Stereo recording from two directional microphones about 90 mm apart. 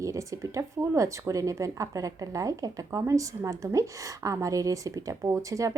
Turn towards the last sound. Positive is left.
turn(degrees=-35)  # may be behind; listen again after turning